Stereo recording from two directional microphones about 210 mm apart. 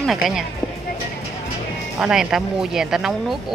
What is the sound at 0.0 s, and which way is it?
Speech, centre (ahead or behind).